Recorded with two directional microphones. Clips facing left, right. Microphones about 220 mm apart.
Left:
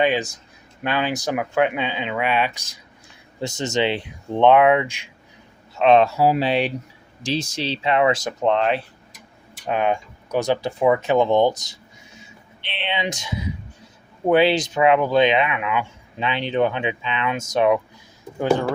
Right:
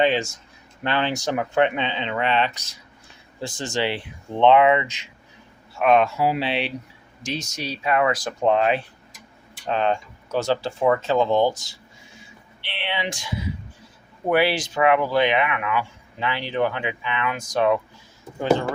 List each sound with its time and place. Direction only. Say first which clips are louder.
0.0 s speech: even; 15° left (ahead or behind)
3.4 s speech: left 4 dB; 20° left (ahead or behind)
5.7 s speech: left 3 dB; 25° left (ahead or behind); by 6.7 s 45° left (ahead or behind)
7.3 s speech: left 5 dB; 30° left (ahead or behind)
8.4 s speech: even; 5° right (ahead or behind)
9.6 s speech: left 1 dB; 10° left (ahead or behind)